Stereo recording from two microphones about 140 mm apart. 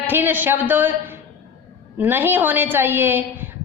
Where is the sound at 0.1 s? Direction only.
15° right (ahead or behind).